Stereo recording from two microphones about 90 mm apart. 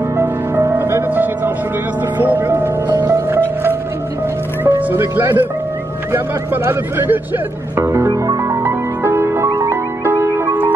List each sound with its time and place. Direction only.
0.2 s music: 30° right (ahead or behind)
4.6 s speech: 20° right (ahead or behind)
8.1 s music: 45° right (ahead or behind)
8.6 s music: 25° right (ahead or behind)